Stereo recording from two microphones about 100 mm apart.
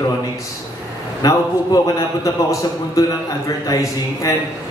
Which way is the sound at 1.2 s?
35° left (ahead or behind).